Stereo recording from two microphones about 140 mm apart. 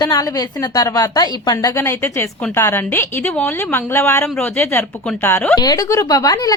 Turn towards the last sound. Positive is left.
turn(degrees=25)  # may be behind; listen again after turning